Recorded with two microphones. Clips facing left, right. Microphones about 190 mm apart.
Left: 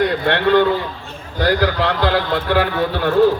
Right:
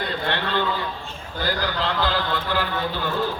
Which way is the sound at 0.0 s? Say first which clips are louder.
Left 10 dB; 70° left (ahead or behind).